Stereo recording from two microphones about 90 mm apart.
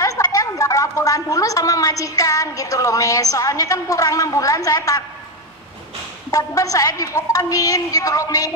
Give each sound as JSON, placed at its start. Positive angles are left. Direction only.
{"t": 0.0, "sound": "a woman's voice", "side_deg": 40}
{"t": 6.3, "sound": "a woman's voice", "side_deg": 40}